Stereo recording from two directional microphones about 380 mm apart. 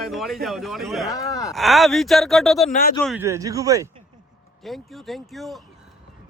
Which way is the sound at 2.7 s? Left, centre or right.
Left.